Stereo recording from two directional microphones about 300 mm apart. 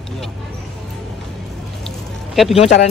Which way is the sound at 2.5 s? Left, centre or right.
Centre.